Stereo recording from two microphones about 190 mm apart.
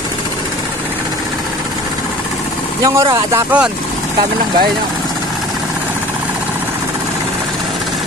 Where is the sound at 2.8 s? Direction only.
20° right (ahead or behind).